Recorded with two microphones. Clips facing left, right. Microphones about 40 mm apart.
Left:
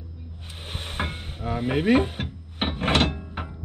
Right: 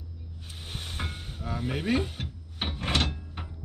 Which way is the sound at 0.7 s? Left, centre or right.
Left.